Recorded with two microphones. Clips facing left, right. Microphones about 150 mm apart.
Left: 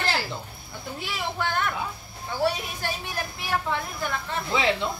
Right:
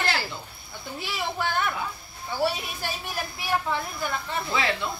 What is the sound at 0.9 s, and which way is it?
Speech, centre (ahead or behind).